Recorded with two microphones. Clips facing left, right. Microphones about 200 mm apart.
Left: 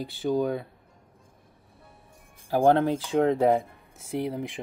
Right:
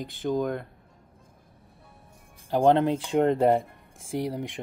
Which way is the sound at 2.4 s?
5° left (ahead or behind).